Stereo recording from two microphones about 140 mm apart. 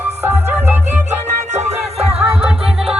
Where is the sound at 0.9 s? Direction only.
55° right (ahead or behind).